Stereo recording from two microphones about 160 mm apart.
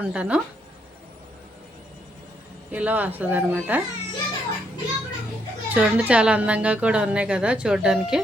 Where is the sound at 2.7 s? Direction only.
10° right (ahead or behind).